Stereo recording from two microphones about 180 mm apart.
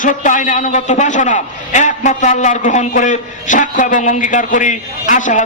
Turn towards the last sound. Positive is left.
turn(degrees=45)  # may be behind; listen again after turning